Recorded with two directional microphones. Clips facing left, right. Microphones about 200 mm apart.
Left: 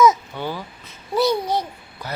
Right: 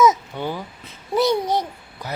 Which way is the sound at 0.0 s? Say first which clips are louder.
Left 1 dB; 20° right (ahead or behind).